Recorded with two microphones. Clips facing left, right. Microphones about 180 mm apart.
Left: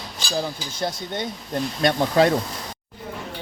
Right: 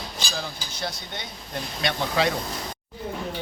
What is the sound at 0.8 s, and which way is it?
Speech, 50° left (ahead or behind).